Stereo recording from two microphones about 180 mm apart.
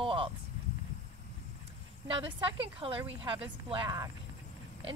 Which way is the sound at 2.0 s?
30° right (ahead or behind).